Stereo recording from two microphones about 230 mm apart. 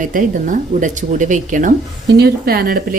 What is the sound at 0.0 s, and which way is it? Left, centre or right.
Speech, right.